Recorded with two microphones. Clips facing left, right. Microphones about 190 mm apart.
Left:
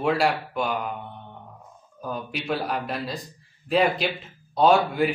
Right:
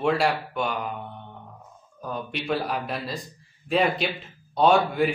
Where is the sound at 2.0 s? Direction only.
Centre (ahead or behind).